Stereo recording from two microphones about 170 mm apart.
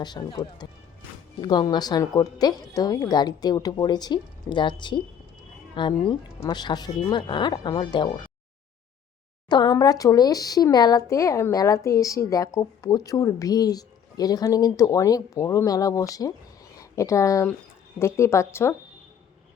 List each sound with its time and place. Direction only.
0.0 s speech: 25° left (ahead or behind)
9.5 s a woman's voice: 25° left (ahead or behind)